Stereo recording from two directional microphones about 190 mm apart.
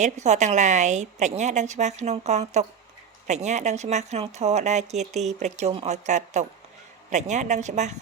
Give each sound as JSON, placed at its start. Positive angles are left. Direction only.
{"t": 0.0, "sound": "speech", "side_deg": -35}